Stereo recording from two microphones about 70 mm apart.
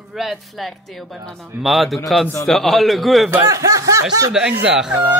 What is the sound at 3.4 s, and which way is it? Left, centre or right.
Speech, right.